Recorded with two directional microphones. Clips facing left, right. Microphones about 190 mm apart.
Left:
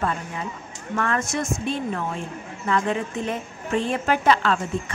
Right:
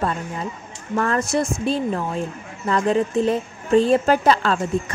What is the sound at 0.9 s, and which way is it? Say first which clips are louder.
A woman's voice: right 5 dB; 35° right (ahead or behind).